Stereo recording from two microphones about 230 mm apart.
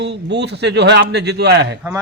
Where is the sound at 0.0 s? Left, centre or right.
Right.